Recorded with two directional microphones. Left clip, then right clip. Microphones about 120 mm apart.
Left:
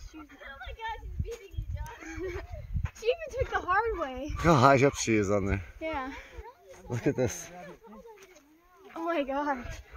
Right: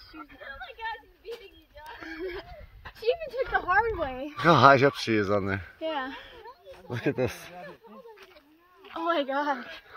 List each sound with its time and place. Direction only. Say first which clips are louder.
0.4 s speech: right 2 dB; 35° right (ahead or behind)
2.0 s speech: right 2 dB; 60° right (ahead or behind)
4.4 s speech: right 4 dB; 5° left (ahead or behind)
5.8 s a sound: right 3 dB; 40° right (ahead or behind)
6.9 s speech: right 1 dB; 25° left (ahead or behind)
8.9 s a sound: right 3 dB; 5° right (ahead or behind)
9.4 s speech: right 2 dB; 5° left (ahead or behind)